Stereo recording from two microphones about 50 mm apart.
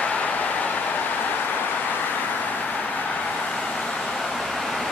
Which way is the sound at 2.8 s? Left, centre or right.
Left.